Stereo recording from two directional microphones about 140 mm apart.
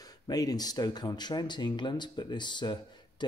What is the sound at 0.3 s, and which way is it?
Speech, 25° left (ahead or behind).